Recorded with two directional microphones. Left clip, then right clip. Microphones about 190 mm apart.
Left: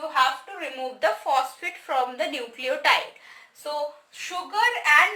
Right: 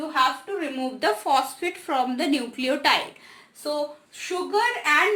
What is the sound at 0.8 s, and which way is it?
A woman's voice, 15° right (ahead or behind).